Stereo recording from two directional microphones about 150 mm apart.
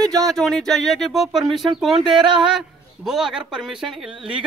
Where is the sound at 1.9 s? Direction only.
30° right (ahead or behind).